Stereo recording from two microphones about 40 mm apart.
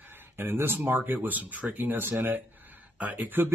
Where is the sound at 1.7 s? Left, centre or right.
Right.